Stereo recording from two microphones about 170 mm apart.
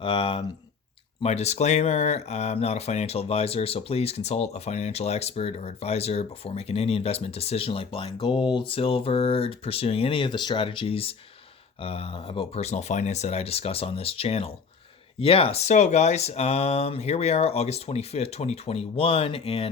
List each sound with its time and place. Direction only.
0.0 s speech: 30° left (ahead or behind)